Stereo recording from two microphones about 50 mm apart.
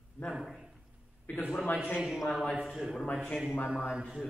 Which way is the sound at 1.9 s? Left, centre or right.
Centre.